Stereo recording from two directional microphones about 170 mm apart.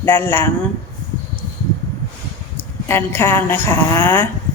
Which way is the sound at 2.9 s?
15° left (ahead or behind).